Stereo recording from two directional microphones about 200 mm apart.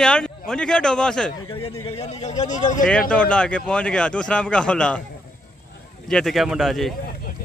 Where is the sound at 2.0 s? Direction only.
35° left (ahead or behind).